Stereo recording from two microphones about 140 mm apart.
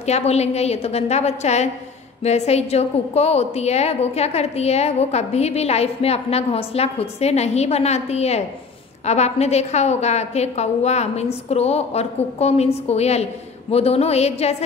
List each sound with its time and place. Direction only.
0.0 s a woman's voice: 50° left (ahead or behind)